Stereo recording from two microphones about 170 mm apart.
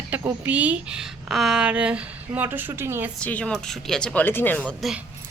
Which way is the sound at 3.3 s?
5° left (ahead or behind).